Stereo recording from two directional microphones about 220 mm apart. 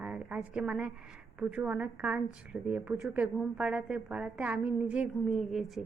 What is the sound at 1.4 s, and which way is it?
Speech, 5° right (ahead or behind).